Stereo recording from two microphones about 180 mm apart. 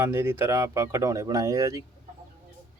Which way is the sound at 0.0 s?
15° right (ahead or behind).